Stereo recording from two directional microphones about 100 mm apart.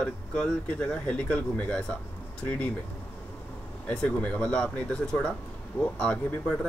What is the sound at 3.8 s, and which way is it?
Speech, 10° left (ahead or behind).